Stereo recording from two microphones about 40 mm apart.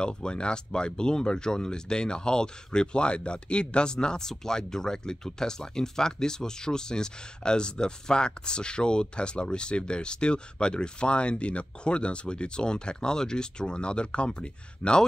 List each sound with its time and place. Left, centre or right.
0.0 s speech: left